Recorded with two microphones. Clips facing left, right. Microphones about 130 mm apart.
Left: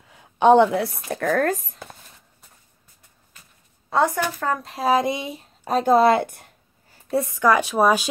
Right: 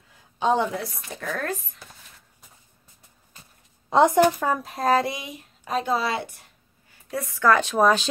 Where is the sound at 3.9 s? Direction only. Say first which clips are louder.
Right 3 dB; 20° right (ahead or behind).